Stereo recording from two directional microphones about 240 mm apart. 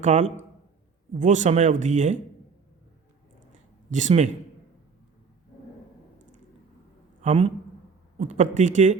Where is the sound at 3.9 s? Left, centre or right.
Right.